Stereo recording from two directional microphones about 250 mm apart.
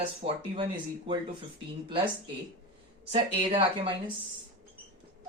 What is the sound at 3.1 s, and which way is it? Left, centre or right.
Speech, right.